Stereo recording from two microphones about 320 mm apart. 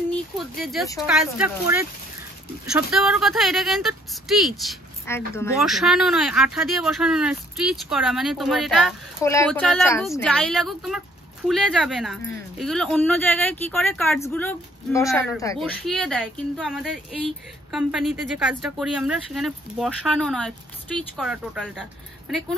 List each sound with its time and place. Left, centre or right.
0.6 s speech: centre